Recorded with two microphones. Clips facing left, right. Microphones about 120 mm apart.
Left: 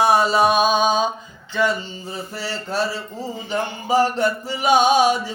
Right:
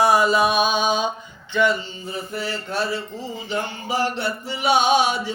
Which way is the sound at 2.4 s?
35° left (ahead or behind).